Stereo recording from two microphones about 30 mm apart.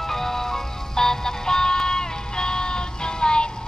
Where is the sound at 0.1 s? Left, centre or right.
Centre.